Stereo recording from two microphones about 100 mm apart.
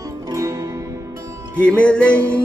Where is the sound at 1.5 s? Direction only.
10° left (ahead or behind).